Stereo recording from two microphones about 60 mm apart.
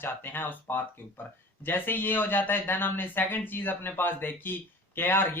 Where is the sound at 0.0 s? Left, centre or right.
Left.